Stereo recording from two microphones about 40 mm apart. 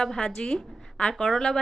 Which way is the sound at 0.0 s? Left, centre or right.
Centre.